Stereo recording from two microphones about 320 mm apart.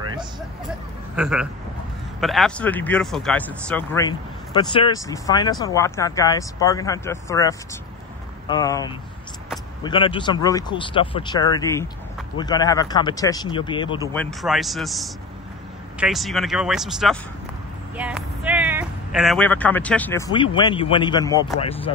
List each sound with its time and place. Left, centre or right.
0.0 s vehicle: centre
1.1 s speech: centre
14.1 s speech: centre